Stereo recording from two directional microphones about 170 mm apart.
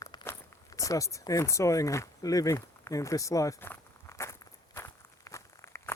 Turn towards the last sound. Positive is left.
turn(degrees=15)  # may be behind; listen again after turning